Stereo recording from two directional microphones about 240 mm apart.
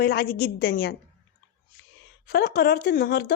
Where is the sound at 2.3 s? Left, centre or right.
Left.